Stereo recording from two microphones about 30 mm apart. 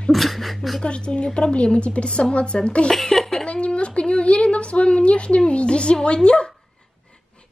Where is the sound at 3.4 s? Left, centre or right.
Left.